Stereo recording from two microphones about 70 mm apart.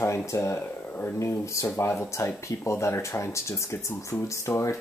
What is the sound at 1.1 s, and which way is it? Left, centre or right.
Speech, left.